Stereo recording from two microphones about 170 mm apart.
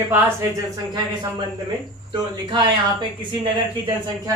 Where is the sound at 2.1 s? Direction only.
30° right (ahead or behind).